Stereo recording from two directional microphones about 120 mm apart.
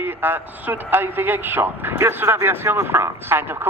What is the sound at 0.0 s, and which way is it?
Speech, 15° right (ahead or behind).